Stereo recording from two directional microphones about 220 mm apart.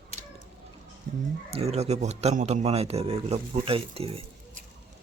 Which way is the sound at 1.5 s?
30° right (ahead or behind).